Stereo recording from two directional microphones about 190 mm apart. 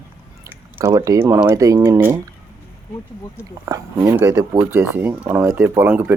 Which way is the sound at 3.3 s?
15° right (ahead or behind).